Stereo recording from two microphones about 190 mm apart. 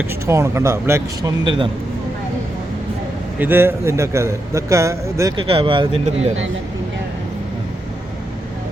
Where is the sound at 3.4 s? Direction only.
10° right (ahead or behind).